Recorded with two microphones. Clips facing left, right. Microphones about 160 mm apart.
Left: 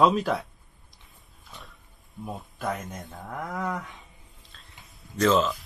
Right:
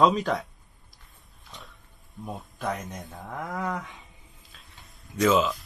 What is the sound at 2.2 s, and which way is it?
Speech, centre (ahead or behind).